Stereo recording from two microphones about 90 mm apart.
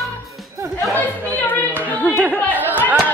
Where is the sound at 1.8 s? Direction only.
20° left (ahead or behind).